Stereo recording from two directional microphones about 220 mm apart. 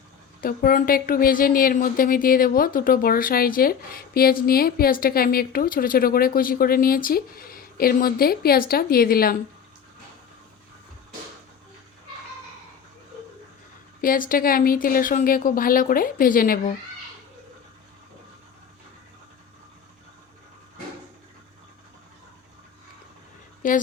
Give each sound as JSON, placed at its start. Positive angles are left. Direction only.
{"t": 0.4, "sound": "a woman's voice", "side_deg": 40}
{"t": 14.0, "sound": "a woman's voice", "side_deg": 40}
{"t": 23.6, "sound": "a woman's voice", "side_deg": 35}